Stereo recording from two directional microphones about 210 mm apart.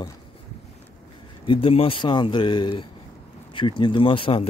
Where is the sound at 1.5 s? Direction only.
25° left (ahead or behind).